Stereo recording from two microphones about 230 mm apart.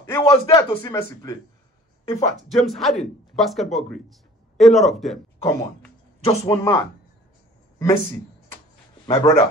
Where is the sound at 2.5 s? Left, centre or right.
Centre.